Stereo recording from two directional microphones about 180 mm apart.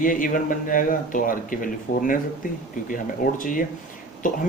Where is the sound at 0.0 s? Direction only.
50° left (ahead or behind).